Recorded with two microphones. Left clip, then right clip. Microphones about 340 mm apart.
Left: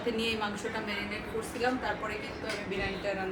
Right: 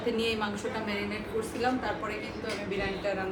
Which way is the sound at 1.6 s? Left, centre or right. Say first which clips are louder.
Even; centre.